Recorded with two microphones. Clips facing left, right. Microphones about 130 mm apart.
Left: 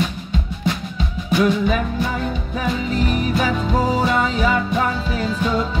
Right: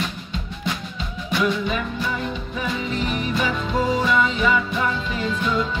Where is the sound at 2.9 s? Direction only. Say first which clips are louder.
Left 4 dB; 40° left (ahead or behind).